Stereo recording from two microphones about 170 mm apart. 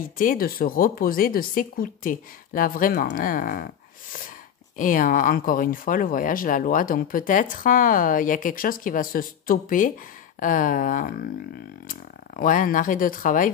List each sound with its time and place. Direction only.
0.2 s speech: 55° left (ahead or behind)